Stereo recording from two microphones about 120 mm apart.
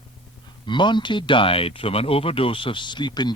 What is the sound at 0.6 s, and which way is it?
A man's voice, 40° left (ahead or behind).